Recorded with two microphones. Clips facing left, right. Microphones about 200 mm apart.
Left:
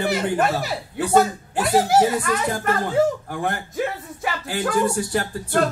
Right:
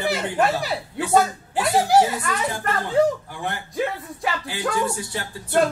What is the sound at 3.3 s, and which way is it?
Speech, 45° left (ahead or behind).